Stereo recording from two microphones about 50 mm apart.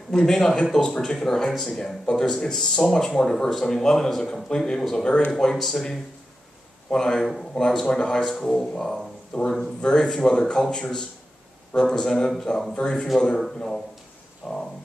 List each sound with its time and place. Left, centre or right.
0.1 s speech: centre
7.6 s speech: centre
14.4 s speech: centre